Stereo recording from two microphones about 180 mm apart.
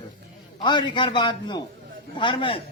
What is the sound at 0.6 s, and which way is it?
A man's voice, 25° left (ahead or behind).